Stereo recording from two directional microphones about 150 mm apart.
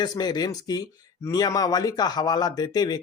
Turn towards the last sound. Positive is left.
turn(degrees=25)  # may be behind; listen again after turning